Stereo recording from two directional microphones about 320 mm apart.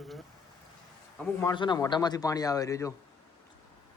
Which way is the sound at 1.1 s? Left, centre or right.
Centre.